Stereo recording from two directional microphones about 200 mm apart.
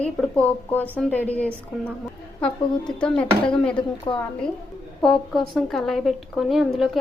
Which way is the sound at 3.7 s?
25° left (ahead or behind).